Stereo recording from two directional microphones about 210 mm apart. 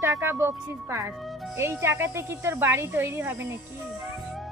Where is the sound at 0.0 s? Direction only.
10° right (ahead or behind).